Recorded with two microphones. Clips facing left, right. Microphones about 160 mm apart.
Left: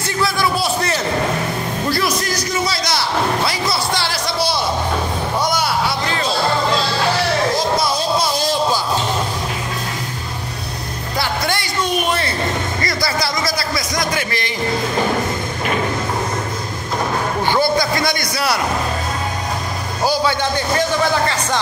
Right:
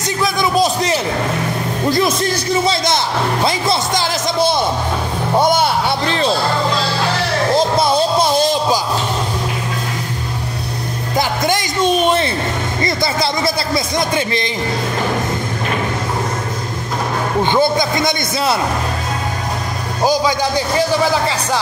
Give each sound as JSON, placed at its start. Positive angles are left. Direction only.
{"t": 0.2, "sound": "a sound", "side_deg": -20}
{"t": 5.5, "sound": "music", "side_deg": -25}
{"t": 11.1, "sound": "music", "side_deg": -15}
{"t": 12.8, "sound": "a man's voice", "side_deg": -25}
{"t": 17.4, "sound": "a man's voice", "side_deg": -20}
{"t": 20.0, "sound": "a man's voice", "side_deg": -15}